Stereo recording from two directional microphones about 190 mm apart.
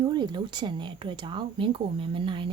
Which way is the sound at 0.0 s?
25° right (ahead or behind).